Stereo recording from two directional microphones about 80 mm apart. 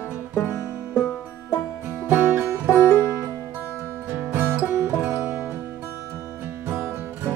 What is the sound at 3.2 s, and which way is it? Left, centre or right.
Music, left.